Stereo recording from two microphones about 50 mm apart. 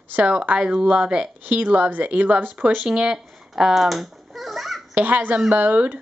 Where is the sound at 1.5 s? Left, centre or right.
Right.